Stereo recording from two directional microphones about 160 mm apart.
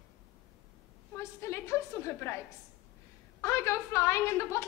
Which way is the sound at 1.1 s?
15° left (ahead or behind).